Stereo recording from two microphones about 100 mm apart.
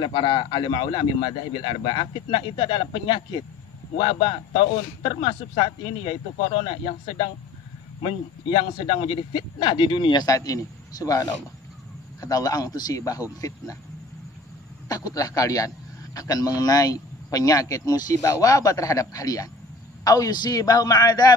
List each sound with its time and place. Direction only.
0.0 s a man's voice: 50° left (ahead or behind)
10.2 s speech: 35° left (ahead or behind)
14.9 s speech: 35° left (ahead or behind)